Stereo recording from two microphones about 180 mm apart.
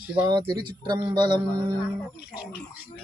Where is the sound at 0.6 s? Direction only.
25° right (ahead or behind).